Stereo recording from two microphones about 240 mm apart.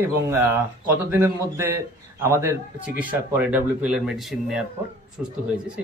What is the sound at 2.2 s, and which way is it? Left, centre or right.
A man's voice, centre.